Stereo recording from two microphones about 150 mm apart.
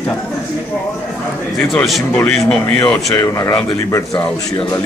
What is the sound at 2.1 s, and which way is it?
A man's voice, 10° left (ahead or behind).